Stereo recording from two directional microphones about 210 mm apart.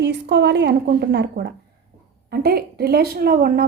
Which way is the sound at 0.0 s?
55° right (ahead or behind).